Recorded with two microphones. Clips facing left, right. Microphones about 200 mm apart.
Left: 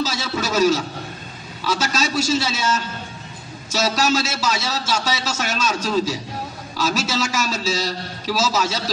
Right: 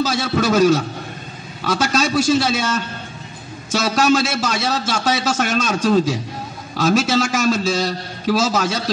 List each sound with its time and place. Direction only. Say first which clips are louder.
0.0 s a man's voice: right 5 dB; 55° right (ahead or behind)